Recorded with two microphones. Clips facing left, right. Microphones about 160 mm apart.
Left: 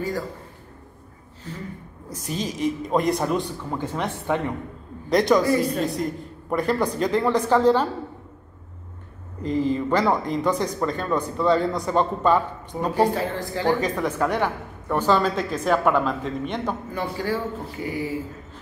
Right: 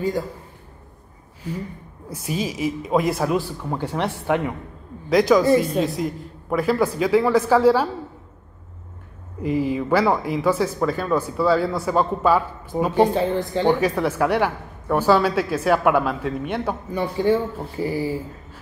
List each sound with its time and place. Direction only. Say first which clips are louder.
1.5 s a woman's voice: right 5 dB; 10° right (ahead or behind)
9.4 s speech: right 1 dB; 10° right (ahead or behind)
12.9 s a woman's voice: right 3 dB; 20° right (ahead or behind)
13.8 s a woman's voice: right 3 dB; 10° right (ahead or behind)
17.2 s speech: right 9 dB; 25° right (ahead or behind)